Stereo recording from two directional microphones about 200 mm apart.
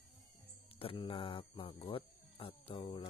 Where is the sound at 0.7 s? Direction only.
25° left (ahead or behind).